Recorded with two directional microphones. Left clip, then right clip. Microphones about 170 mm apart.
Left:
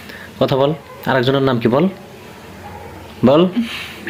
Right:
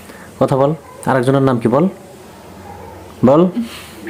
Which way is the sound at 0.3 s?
15° right (ahead or behind).